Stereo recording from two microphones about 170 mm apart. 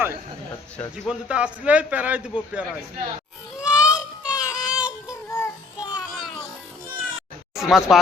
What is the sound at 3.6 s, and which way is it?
Music, 5° right (ahead or behind).